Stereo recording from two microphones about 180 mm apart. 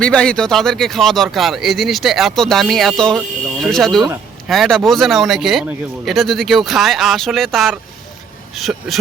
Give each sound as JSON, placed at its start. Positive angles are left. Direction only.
{"t": 0.0, "sound": "speech", "side_deg": 5}